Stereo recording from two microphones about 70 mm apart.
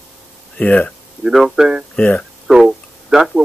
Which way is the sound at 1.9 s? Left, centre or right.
Centre.